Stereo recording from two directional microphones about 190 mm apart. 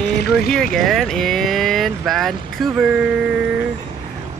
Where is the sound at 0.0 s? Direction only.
60° left (ahead or behind).